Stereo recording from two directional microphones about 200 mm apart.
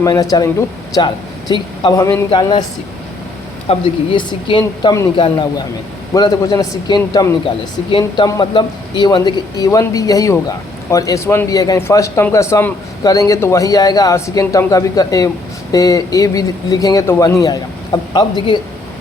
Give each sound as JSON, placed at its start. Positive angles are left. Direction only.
{"t": 0.0, "sound": "a man's voice", "side_deg": 15}
{"t": 3.7, "sound": "a man's voice", "side_deg": 25}